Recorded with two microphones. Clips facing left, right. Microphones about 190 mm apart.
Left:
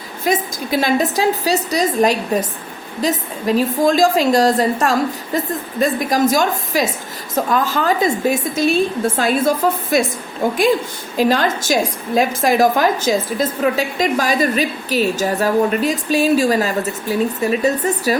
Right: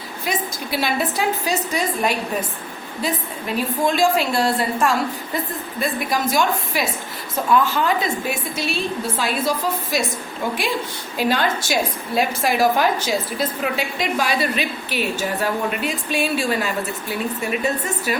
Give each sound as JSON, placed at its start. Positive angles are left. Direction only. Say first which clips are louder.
{"t": 0.3, "sound": "a woman's voice", "louder": "left 7 dB", "side_deg": 45}
{"t": 3.4, "sound": "a woman's voice", "louder": "left 7 dB", "side_deg": 40}